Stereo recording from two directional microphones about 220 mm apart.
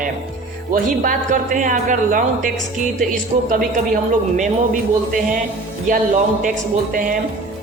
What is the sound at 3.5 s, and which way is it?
A woman's voice, 35° right (ahead or behind).